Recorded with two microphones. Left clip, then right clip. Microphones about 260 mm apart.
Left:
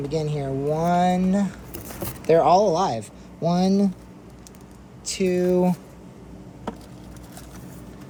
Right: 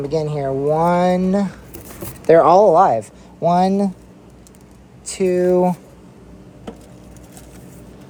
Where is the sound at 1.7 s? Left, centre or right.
Centre.